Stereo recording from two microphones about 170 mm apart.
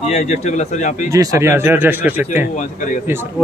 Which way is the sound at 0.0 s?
40° left (ahead or behind).